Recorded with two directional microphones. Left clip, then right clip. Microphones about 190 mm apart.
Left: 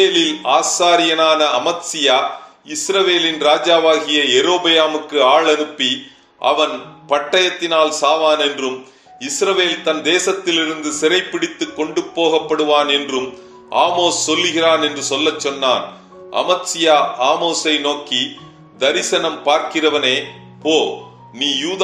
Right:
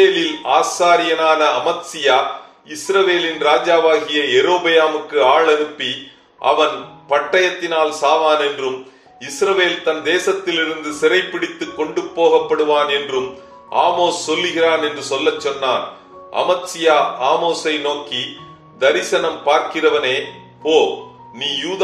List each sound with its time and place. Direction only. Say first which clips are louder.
0.0 s a man's voice: even; 45° left (ahead or behind)
21.4 s a man's voice: left 2 dB; 45° left (ahead or behind)